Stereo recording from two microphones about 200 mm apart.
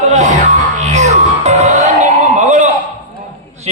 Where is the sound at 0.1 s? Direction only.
35° right (ahead or behind).